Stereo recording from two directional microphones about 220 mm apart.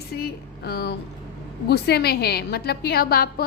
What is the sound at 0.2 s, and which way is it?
A woman's voice, 50° left (ahead or behind).